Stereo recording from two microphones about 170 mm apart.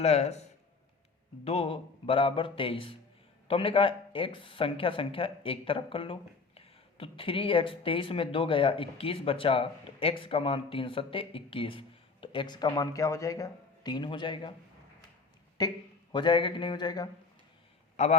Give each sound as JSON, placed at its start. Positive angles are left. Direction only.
{"t": 0.0, "sound": "speech", "side_deg": 40}
{"t": 1.5, "sound": "speech", "side_deg": 35}
{"t": 15.6, "sound": "a sound", "side_deg": 25}
{"t": 17.9, "sound": "a man's voice", "side_deg": 40}